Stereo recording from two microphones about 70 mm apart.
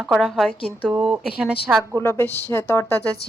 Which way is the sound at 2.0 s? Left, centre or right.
Left.